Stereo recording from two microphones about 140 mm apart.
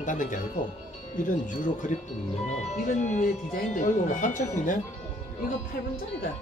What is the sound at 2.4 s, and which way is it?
Speech, 55° left (ahead or behind).